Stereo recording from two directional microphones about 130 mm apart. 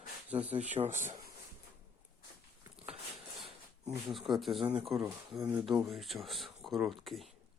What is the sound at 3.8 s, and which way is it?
Speech, centre (ahead or behind).